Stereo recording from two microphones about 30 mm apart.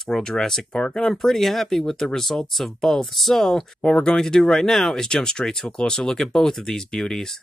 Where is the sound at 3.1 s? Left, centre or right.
Centre.